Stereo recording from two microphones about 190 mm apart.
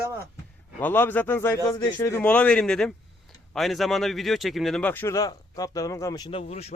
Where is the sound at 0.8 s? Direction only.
10° left (ahead or behind).